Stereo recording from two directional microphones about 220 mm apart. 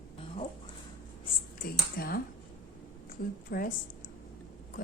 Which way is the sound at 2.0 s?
45° left (ahead or behind).